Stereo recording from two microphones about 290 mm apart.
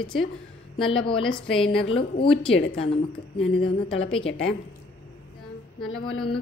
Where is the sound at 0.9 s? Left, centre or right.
Centre.